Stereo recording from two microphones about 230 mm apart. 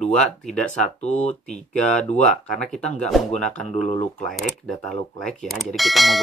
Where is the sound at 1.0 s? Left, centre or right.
Left.